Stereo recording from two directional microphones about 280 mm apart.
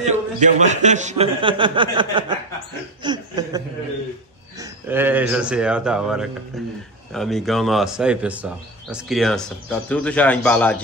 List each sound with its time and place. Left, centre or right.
0.0 s a man's voice: right
3.0 s chuckle: centre
4.6 s speech: centre